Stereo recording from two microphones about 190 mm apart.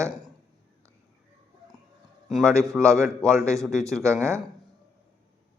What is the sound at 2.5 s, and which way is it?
A man's voice, 15° right (ahead or behind).